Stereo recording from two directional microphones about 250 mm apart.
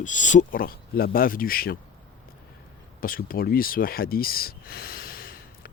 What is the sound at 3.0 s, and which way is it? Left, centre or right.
Speech, left.